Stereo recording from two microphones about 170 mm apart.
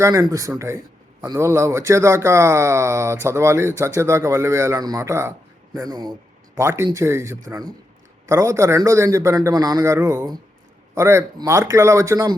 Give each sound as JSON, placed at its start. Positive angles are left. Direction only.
{"t": 0.0, "sound": "speech", "side_deg": -20}